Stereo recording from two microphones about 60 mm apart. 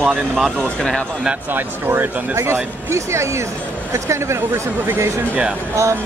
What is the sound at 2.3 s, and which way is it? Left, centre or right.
Speech, right.